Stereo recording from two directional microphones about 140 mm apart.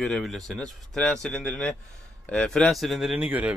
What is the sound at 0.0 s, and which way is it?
A man's voice, 5° left (ahead or behind).